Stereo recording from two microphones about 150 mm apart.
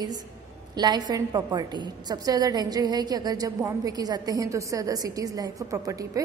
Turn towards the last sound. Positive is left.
turn(degrees=-20)  # may be behind; listen again after turning